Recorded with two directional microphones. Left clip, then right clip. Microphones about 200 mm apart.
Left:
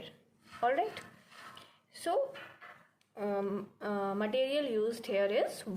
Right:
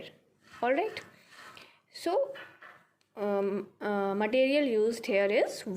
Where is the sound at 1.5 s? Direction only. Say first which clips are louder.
Right 4 dB; 30° right (ahead or behind).